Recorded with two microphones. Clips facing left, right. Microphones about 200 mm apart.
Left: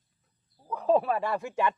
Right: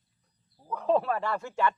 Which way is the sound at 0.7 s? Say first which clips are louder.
Left 1 dB; 10° left (ahead or behind).